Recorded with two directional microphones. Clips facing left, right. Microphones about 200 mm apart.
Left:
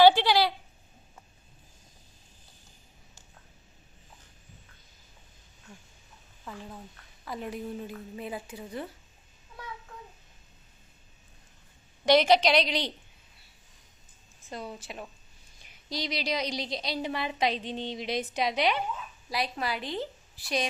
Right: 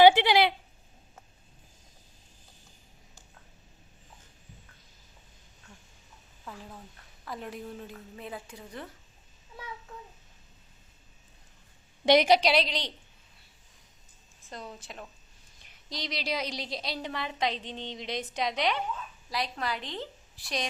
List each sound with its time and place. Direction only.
0.0 s a sound: 20° right (ahead or behind)
6.4 s a woman's voice: centre (ahead or behind)
12.0 s a woman's voice: 15° right (ahead or behind); by 12.9 s 5° left (ahead or behind)
14.5 s a woman's voice: 5° left (ahead or behind)